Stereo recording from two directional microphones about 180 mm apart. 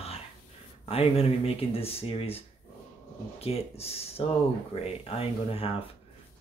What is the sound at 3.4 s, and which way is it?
Speech, 35° left (ahead or behind).